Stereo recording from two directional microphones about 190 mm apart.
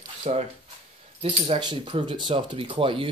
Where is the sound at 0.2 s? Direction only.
35° right (ahead or behind).